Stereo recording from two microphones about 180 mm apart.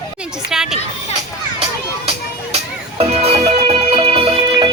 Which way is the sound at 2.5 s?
35° right (ahead or behind).